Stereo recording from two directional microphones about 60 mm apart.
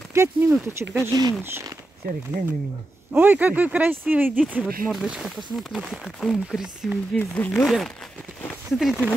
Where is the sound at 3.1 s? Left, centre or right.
Right.